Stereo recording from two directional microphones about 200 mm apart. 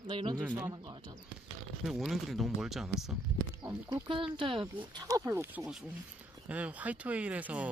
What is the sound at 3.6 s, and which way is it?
Speech, 20° right (ahead or behind).